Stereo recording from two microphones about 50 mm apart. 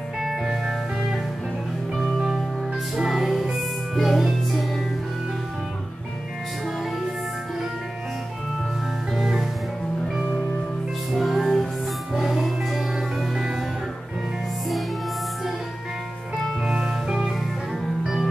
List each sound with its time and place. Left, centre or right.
0.2 s music: centre
9.1 s music: centre
11.1 s music: centre
16.6 s music: centre